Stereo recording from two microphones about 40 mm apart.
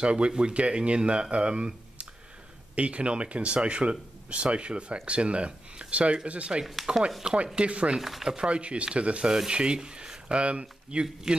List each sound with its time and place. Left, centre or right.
0.0 s speech: right
6.6 s speech: centre
7.5 s speech: right
8.0 s speech: centre
8.4 s speech: right